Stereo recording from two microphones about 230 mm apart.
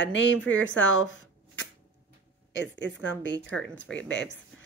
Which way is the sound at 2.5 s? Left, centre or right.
Left.